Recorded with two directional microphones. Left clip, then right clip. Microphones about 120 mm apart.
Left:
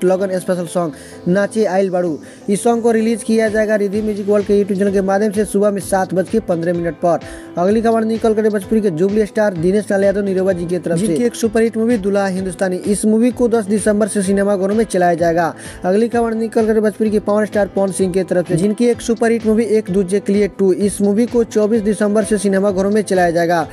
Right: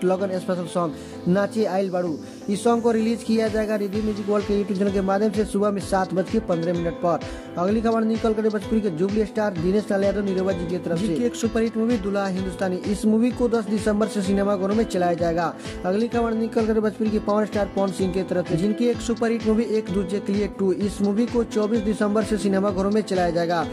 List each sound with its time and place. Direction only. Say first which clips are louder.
0.0 s speech: left 7 dB; 30° left (ahead or behind)